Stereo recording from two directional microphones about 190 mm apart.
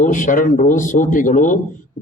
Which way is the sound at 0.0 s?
45° left (ahead or behind).